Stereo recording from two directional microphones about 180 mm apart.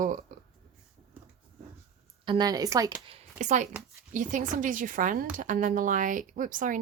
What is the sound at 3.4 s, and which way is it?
Speech, 40° right (ahead or behind).